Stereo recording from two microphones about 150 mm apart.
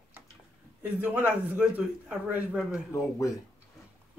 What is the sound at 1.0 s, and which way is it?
Speech, 10° right (ahead or behind).